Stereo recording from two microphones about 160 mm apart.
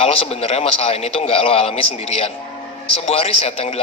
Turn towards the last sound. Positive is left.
turn(degrees=35)  # may be behind; listen again after turning